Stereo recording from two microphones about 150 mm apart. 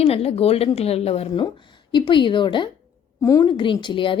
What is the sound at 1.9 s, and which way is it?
Speech, 30° left (ahead or behind).